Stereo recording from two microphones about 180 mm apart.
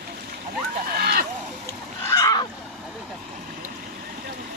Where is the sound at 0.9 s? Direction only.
60° right (ahead or behind).